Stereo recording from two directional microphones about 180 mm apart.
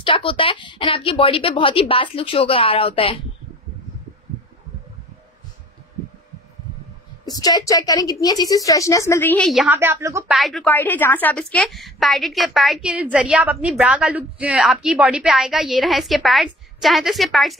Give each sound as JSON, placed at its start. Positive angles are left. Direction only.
{"t": 0.0, "sound": "speech", "side_deg": 30}
{"t": 7.2, "sound": "speech", "side_deg": 20}
{"t": 9.5, "sound": "a woman's voice", "side_deg": 0}
{"t": 9.8, "sound": "speech", "side_deg": -15}
{"t": 10.2, "sound": "a woman's voice", "side_deg": 0}